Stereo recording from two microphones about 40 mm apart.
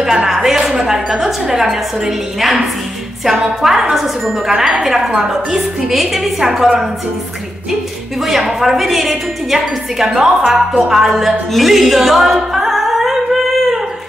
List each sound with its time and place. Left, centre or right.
0.3 s a woman's voice: centre
3.6 s a woman's voice: centre
8.3 s a woman's voice: centre
10.9 s a capella: centre